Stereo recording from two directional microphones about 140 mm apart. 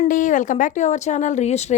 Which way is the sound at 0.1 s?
70° left (ahead or behind).